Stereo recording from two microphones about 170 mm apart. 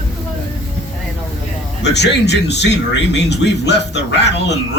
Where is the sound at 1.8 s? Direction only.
90° left.